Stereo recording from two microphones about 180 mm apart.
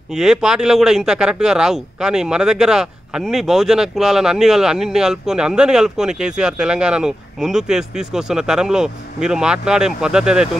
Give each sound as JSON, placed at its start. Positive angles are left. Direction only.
{"t": 0.1, "sound": "a man's voice", "side_deg": -5}